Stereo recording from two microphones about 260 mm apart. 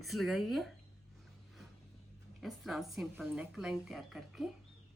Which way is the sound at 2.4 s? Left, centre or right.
Centre.